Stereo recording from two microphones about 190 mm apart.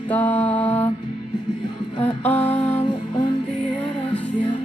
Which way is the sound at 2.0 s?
10° left (ahead or behind).